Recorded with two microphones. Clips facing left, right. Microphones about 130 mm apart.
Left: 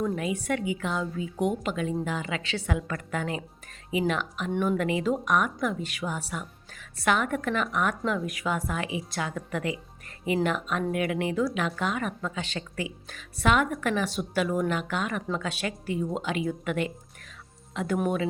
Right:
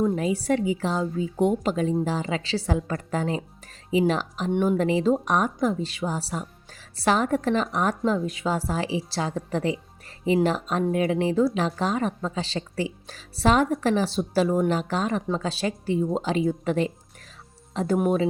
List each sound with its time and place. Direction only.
0.0 s speech: 30° right (ahead or behind)